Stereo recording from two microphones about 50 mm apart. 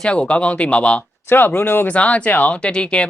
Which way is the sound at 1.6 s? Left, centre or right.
Left.